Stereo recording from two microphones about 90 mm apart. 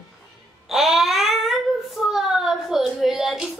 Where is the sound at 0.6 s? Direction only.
5° right (ahead or behind).